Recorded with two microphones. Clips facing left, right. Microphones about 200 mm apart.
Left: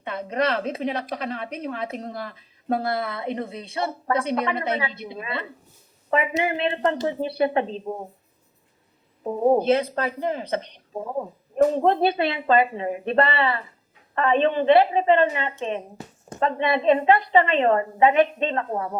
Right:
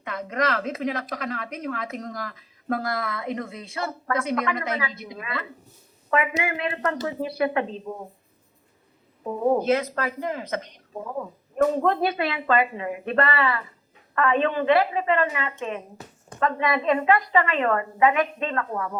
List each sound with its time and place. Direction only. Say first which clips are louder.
0.0 s speech: left 2 dB; 30° left (ahead or behind)
9.2 s speech: left 3 dB; 35° left (ahead or behind)